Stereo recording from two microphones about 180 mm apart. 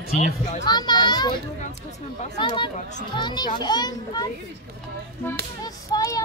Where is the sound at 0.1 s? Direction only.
40° left (ahead or behind).